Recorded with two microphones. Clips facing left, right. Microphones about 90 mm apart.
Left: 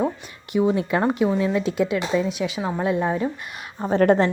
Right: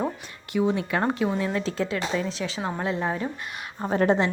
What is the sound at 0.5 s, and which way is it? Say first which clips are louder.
Speech: left 4 dB; 20° left (ahead or behind).